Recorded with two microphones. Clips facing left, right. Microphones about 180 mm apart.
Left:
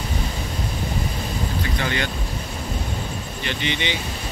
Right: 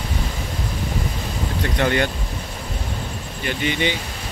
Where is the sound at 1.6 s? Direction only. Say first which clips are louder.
Right 9 dB; 55° right (ahead or behind).